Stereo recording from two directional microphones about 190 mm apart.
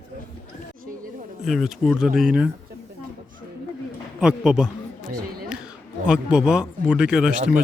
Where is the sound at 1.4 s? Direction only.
Centre (ahead or behind).